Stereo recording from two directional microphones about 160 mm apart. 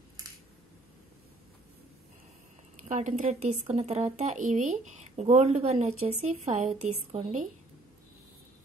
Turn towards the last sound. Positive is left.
turn(degrees=-40)  # may be behind; listen again after turning